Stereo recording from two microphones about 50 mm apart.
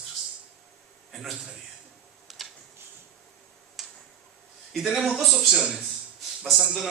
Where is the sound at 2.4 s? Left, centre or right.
Centre.